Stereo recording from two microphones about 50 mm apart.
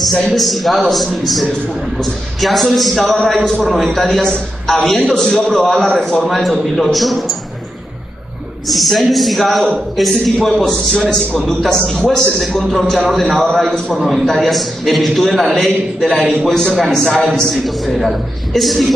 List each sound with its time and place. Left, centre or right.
0.3 s a man's voice: centre
8.6 s a man's voice: centre
12.4 s a man's voice: centre
13.1 s a man's voice: centre